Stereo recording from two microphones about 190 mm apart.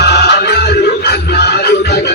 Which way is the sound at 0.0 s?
60° left (ahead or behind).